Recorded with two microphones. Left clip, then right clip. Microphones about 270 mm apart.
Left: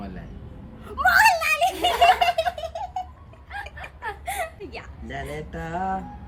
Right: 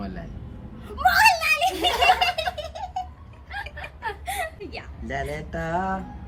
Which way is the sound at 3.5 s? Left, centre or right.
Centre.